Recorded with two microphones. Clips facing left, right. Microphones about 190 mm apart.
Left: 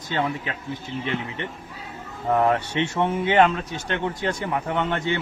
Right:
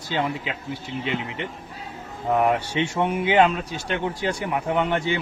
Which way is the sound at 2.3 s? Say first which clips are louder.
Even; 15° right (ahead or behind).